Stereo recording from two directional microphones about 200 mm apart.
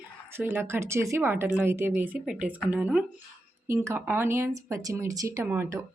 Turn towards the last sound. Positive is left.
turn(degrees=-10)  # may be behind; listen again after turning